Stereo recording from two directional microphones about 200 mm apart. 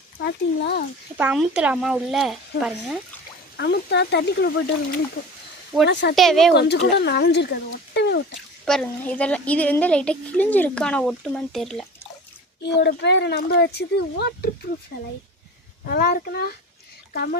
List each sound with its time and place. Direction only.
0.2 s speech: 55° left (ahead or behind)
1.2 s a woman's voice: 5° right (ahead or behind)
3.6 s speech: 60° left (ahead or behind)
5.2 s speech: 80° left
5.8 s speech: 55° left (ahead or behind)
6.1 s a woman's voice: centre (ahead or behind)
6.5 s speech: 55° left (ahead or behind)
7.9 s a sound: 55° left (ahead or behind)
8.6 s a woman's voice: 5° left (ahead or behind)
12.8 s speech: 60° left (ahead or behind)
15.9 s a child's voice: 50° left (ahead or behind)